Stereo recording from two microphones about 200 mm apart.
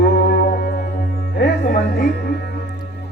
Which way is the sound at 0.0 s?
55° left (ahead or behind).